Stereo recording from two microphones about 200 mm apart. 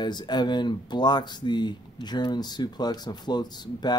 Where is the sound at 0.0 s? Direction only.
20° left (ahead or behind).